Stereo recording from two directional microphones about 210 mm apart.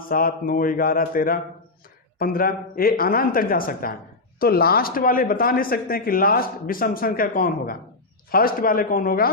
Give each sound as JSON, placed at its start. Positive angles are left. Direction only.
{"t": 0.1, "sound": "speech", "side_deg": 45}